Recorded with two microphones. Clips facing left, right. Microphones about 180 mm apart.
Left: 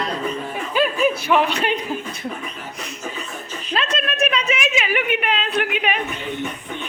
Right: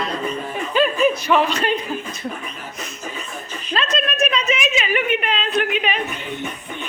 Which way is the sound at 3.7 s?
10° left (ahead or behind).